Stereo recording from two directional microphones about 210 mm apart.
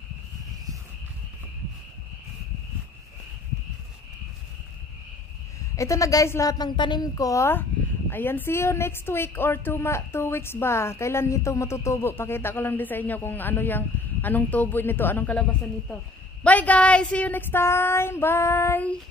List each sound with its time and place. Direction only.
5.8 s a woman's voice: 15° left (ahead or behind)
16.4 s a woman's voice: 5° left (ahead or behind)